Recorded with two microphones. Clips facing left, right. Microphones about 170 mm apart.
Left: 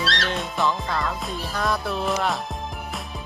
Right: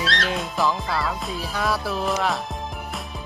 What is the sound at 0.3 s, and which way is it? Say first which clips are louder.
Music: right 1 dB; centre (ahead or behind).